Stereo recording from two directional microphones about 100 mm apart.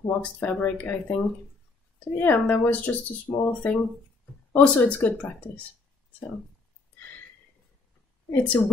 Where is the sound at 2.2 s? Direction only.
20° left (ahead or behind).